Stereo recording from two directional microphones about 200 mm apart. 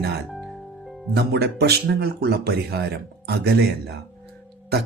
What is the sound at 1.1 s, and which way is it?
Speech, 55° right (ahead or behind).